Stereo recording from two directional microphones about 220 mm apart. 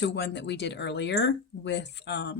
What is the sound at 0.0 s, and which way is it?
Speech, 55° left (ahead or behind).